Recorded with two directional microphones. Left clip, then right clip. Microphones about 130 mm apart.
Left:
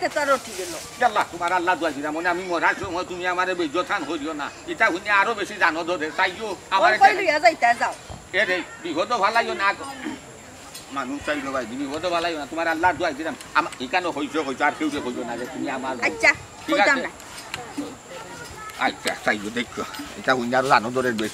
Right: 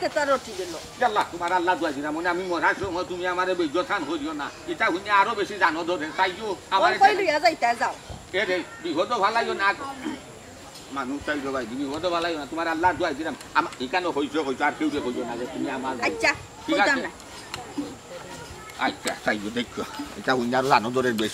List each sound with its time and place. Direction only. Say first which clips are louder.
0.0 s speech: left 2 dB; centre (ahead or behind)
11.0 s speech: left 2 dB; 5° left (ahead or behind)
18.8 s speech: left 3 dB; 5° left (ahead or behind)